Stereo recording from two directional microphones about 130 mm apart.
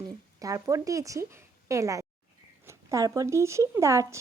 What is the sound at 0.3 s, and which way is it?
A woman's voice, 25° right (ahead or behind).